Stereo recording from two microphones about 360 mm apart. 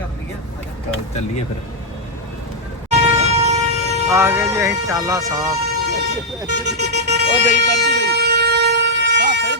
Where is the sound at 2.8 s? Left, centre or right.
Centre.